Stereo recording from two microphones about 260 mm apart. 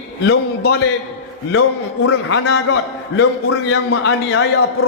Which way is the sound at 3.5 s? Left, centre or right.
Left.